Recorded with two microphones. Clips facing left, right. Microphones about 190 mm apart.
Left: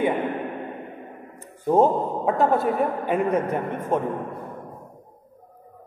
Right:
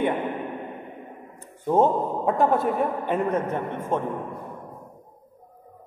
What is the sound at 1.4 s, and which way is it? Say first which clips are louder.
A man's voice: left 2 dB; 5° left (ahead or behind).